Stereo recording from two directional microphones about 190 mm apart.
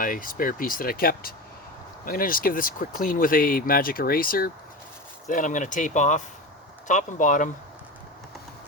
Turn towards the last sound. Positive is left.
turn(degrees=45)  # may be behind; listen again after turning